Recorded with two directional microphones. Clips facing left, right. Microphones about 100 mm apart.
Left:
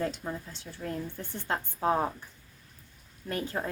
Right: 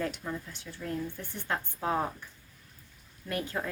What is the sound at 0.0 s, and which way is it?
Speech, 30° left (ahead or behind).